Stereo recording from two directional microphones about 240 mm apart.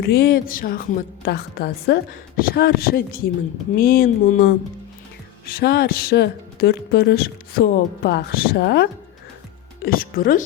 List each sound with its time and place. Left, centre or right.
0.0 s speech: left
5.5 s speech: left